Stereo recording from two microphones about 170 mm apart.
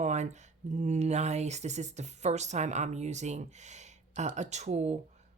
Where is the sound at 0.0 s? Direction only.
45° right (ahead or behind).